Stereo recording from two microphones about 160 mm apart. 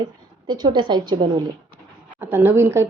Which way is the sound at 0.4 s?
25° right (ahead or behind).